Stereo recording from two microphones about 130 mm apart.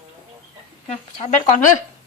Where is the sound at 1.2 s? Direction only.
70° left (ahead or behind).